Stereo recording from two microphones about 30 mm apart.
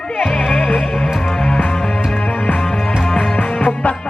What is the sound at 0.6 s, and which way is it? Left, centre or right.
Music, left.